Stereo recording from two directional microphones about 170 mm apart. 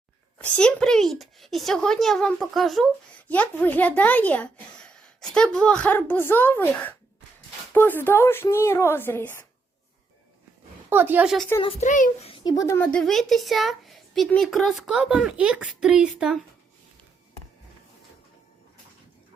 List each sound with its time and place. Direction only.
0.5 s speech: 5° left (ahead or behind)
10.8 s a woman's voice: 10° right (ahead or behind)
11.6 s a child's voice: 45° left (ahead or behind)
12.3 s speech: 25° left (ahead or behind); by 16.4 s 5° right (ahead or behind)